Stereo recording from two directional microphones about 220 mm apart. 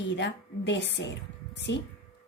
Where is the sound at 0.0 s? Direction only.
55° left (ahead or behind).